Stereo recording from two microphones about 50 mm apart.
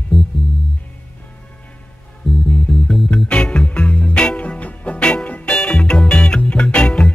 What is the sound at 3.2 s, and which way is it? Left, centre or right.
Music, centre.